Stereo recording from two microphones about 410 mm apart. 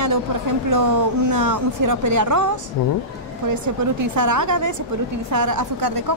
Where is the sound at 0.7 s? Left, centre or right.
Right.